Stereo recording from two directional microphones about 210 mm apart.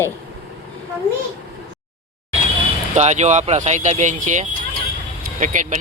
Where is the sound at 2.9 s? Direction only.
35° right (ahead or behind).